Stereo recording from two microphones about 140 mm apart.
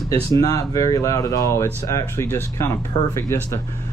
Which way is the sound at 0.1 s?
25° left (ahead or behind).